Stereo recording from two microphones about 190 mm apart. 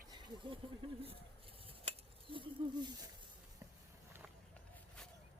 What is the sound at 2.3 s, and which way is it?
Speech, 25° right (ahead or behind).